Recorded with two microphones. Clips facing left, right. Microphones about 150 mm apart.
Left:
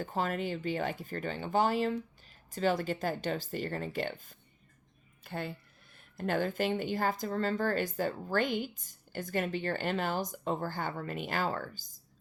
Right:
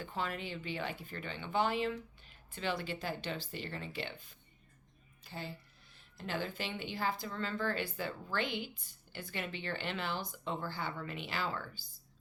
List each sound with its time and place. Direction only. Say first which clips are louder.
0.0 s speech: left 6 dB; 40° left (ahead or behind)